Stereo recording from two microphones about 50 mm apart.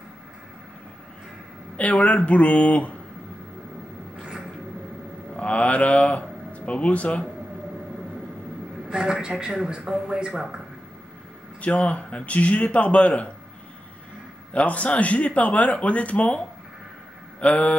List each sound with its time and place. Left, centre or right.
1.8 s speech: left
4.2 s a sound: centre
5.3 s speech: left
8.8 s a man's voice: centre
11.6 s speech: left
14.5 s speech: left
17.4 s speech: left